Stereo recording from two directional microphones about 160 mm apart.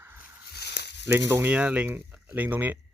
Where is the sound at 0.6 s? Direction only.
90° left.